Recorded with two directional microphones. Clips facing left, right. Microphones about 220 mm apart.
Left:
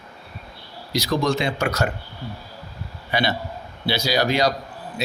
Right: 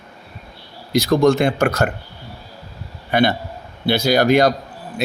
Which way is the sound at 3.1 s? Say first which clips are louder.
Right 6 dB; 55° right (ahead or behind).